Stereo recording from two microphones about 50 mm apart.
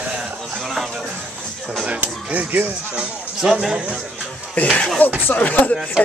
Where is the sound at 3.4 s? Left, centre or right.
Centre.